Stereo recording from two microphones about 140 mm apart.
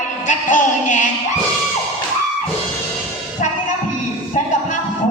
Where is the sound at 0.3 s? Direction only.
65° left (ahead or behind).